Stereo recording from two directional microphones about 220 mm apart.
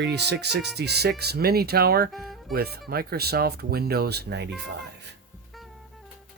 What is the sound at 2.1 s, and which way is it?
Music, centre (ahead or behind).